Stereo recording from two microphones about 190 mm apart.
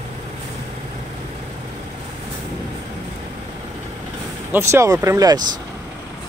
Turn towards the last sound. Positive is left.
turn(degrees=-15)  # may be behind; listen again after turning